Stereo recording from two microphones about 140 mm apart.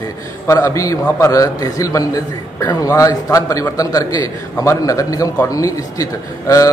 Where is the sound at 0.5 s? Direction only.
20° left (ahead or behind).